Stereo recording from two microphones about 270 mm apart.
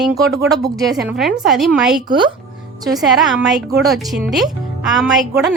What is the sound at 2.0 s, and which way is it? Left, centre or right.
Music, centre.